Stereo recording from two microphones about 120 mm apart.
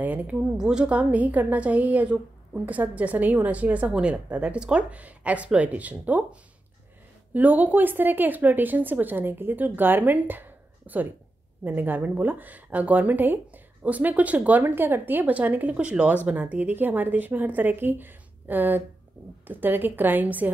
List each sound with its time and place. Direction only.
0.0 s a woman's voice: 15° right (ahead or behind)
7.3 s a woman's voice: 15° right (ahead or behind)